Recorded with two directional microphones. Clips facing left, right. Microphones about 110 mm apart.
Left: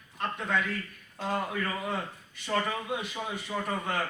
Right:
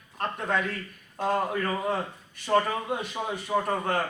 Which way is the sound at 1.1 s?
50° right (ahead or behind).